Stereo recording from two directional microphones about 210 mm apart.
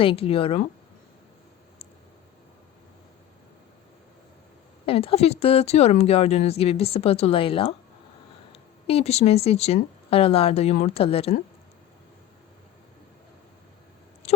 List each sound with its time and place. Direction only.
0.0 s speech: 25° left (ahead or behind)
4.9 s speech: 25° left (ahead or behind)
8.9 s speech: 30° left (ahead or behind)
14.2 s a sound: 30° left (ahead or behind)